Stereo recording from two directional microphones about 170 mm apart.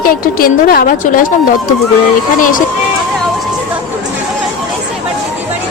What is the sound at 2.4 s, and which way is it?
Speech, 50° left (ahead or behind).